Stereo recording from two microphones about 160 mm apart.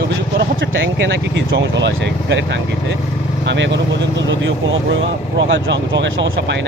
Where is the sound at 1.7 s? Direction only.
90° right.